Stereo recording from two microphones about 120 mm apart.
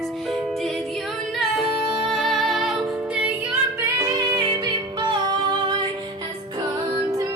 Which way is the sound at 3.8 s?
30° right (ahead or behind).